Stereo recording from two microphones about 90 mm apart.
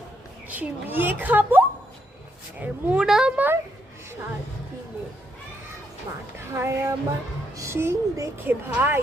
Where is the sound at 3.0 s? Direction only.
5° right (ahead or behind).